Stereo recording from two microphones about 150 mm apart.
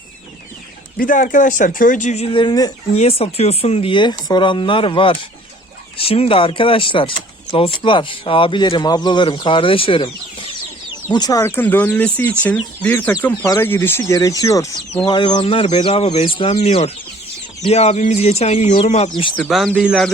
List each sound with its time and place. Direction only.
0.9 s speech: 65° left (ahead or behind)
2.3 s speech: 30° left (ahead or behind)
2.9 s speech: 45° left (ahead or behind)
11.1 s speech: 25° left (ahead or behind)
19.5 s speech: centre (ahead or behind)